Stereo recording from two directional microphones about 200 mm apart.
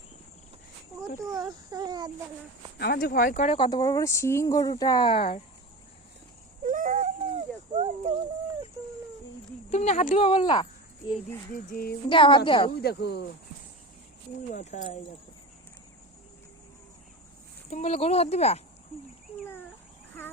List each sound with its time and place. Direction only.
1.3 s a sound: 20° right (ahead or behind)
2.7 s speech: 50° left (ahead or behind); by 5.4 s 30° left (ahead or behind)
6.7 s baby cry: 40° right (ahead or behind)
9.6 s speech: 35° left (ahead or behind)
11.5 s speech: 50° left (ahead or behind)
12.0 s speech: 25° left (ahead or behind)
12.8 s speech: 55° left (ahead or behind)
14.5 s speech: 35° left (ahead or behind)
17.7 s speech: 35° left (ahead or behind)